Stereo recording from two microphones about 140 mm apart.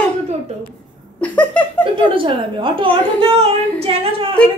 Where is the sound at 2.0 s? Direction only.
35° right (ahead or behind).